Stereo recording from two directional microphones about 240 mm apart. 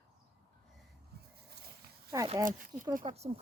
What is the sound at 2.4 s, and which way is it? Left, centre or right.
Speech, right.